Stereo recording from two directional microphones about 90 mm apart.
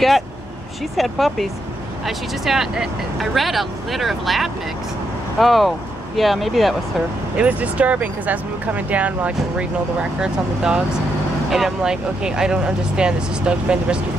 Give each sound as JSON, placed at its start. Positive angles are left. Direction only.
{"t": 0.9, "sound": "speech", "side_deg": 0}
{"t": 7.3, "sound": "speech", "side_deg": -15}